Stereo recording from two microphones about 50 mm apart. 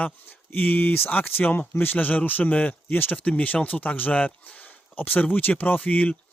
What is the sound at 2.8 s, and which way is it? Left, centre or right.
Speech, left.